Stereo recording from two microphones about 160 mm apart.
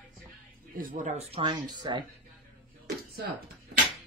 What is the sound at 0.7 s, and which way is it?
Speech, 60° right (ahead or behind).